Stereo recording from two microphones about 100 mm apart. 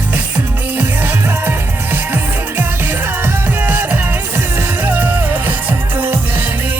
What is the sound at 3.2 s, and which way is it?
Music, 20° right (ahead or behind).